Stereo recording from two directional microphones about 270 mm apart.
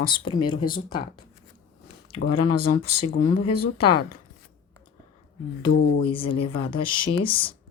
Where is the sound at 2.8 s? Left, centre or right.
Left.